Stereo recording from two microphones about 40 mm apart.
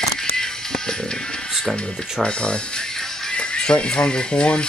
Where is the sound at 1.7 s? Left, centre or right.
Left.